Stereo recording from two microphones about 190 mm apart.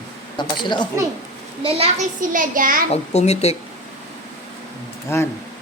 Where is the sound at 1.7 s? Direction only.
40° right (ahead or behind).